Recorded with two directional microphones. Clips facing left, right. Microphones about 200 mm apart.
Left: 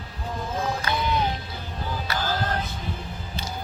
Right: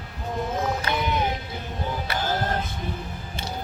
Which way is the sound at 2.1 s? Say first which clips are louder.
Even; 25° right (ahead or behind).